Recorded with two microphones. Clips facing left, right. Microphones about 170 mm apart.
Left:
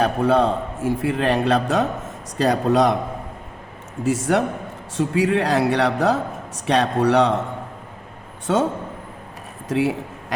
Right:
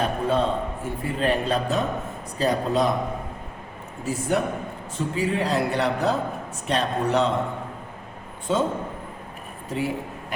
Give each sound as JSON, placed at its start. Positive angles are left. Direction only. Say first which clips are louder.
{"t": 0.0, "sound": "a man's voice", "louder": "left 5 dB", "side_deg": 85}
{"t": 4.0, "sound": "a man's voice", "louder": "left 5 dB", "side_deg": 80}
{"t": 9.6, "sound": "a man's voice", "louder": "left 6 dB", "side_deg": 85}